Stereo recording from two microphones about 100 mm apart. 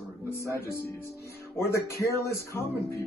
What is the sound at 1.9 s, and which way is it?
Speech, 30° left (ahead or behind).